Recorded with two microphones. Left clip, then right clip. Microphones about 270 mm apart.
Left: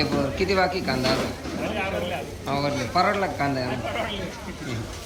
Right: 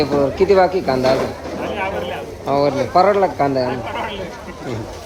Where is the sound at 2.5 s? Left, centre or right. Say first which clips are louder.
Right 10 dB; centre.